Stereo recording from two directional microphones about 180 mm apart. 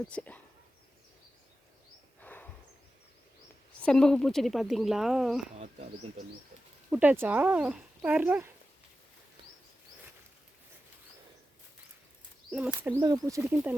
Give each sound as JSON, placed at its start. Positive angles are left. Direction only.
{"t": 0.1, "sound": "speech", "side_deg": 5}
{"t": 2.2, "sound": "a sound", "side_deg": 10}
{"t": 3.8, "sound": "speech", "side_deg": 5}
{"t": 6.9, "sound": "speech", "side_deg": -10}
{"t": 12.5, "sound": "speech", "side_deg": -5}
{"t": 12.9, "sound": "speech", "side_deg": -20}